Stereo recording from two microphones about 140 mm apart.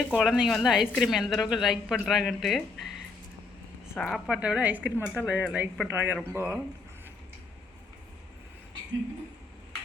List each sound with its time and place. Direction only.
0.2 s a woman's voice: centre (ahead or behind)
3.9 s speech: 5° left (ahead or behind)
4.3 s a woman's voice: 10° right (ahead or behind)
4.9 s speech: 15° left (ahead or behind)
5.2 s a woman's voice: 5° right (ahead or behind)
5.9 s a woman's voice: 15° right (ahead or behind)